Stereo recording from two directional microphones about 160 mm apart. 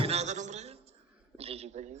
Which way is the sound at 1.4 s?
40° right (ahead or behind).